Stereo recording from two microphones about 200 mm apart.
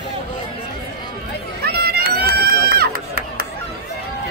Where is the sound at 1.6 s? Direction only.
50° right (ahead or behind).